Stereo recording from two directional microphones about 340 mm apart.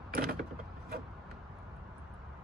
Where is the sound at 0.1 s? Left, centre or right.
Right.